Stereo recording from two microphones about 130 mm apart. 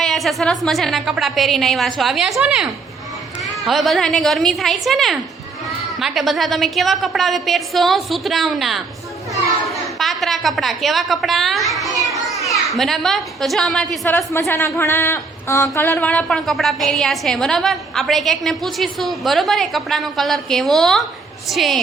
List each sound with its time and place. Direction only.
0.0 s a woman's voice: centre (ahead or behind)
14.0 s speech: 20° left (ahead or behind); by 21.8 s centre (ahead or behind)